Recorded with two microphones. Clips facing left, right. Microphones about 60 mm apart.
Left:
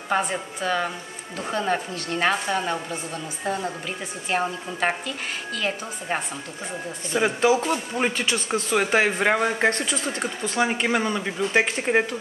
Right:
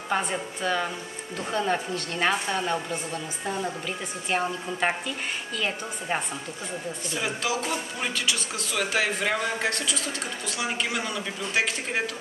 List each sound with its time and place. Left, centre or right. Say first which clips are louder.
0.1 s a woman's voice: left 3 dB; centre
7.2 s speech: left 9 dB; left